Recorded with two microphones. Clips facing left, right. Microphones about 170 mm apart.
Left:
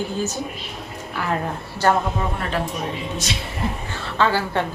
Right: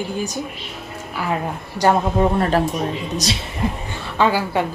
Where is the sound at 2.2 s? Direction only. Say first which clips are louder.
Right 8 dB; 40° right (ahead or behind).